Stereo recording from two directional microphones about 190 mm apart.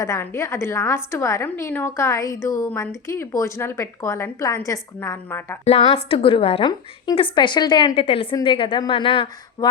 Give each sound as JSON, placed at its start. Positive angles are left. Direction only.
{"t": 0.0, "sound": "a woman's voice", "side_deg": 15}
{"t": 5.6, "sound": "a woman's voice", "side_deg": 30}